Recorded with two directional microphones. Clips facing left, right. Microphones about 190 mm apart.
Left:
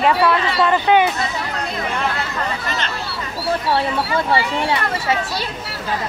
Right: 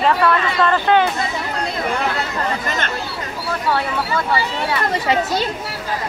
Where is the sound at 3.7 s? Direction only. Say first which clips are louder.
Right 1 dB; 25° left (ahead or behind).